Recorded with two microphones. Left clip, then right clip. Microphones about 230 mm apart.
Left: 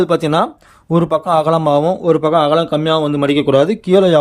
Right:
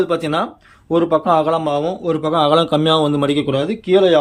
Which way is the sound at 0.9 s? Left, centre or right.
Left.